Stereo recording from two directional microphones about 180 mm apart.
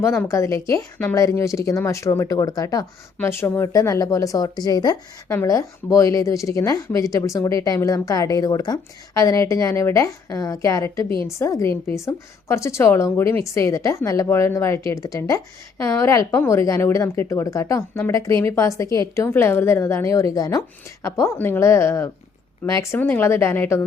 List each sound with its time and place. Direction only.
0.0 s speech: 15° left (ahead or behind)